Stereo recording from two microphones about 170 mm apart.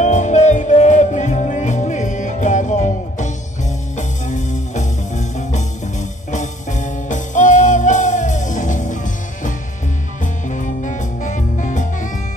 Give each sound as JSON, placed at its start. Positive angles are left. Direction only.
{"t": 0.0, "sound": "music", "side_deg": 45}
{"t": 10.5, "sound": "music", "side_deg": 45}